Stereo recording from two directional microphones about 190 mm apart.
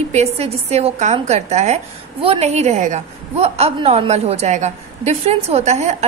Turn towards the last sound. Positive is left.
turn(degrees=-35)  # may be behind; listen again after turning